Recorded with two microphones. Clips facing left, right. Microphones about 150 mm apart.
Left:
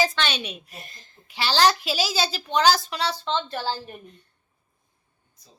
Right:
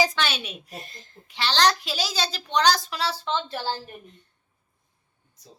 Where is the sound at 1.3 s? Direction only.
5° left (ahead or behind); by 3.7 s 10° right (ahead or behind).